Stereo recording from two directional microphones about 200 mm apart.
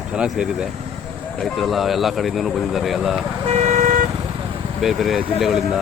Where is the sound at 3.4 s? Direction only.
35° right (ahead or behind).